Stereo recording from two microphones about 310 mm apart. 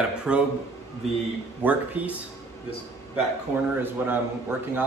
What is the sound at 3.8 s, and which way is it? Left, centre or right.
A man's voice, centre.